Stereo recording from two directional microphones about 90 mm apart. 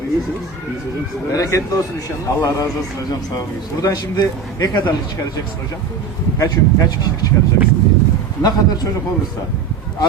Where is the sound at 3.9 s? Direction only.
50° left (ahead or behind).